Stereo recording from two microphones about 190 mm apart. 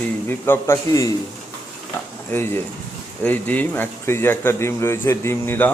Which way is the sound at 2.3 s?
10° left (ahead or behind).